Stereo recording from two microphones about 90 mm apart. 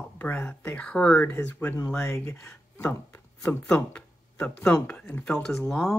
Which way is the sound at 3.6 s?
15° left (ahead or behind).